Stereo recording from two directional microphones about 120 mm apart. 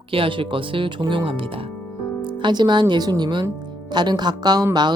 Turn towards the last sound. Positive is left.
turn(degrees=-35)  # may be behind; listen again after turning